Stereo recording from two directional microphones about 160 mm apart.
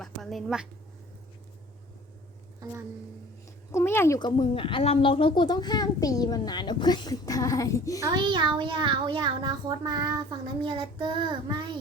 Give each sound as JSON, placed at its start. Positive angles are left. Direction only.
{"t": 0.0, "sound": "a woman's voice", "side_deg": 0}
{"t": 3.4, "sound": "a sound", "side_deg": 15}
{"t": 4.2, "sound": "a woman's voice", "side_deg": 25}
{"t": 8.1, "sound": "a child's voice", "side_deg": -30}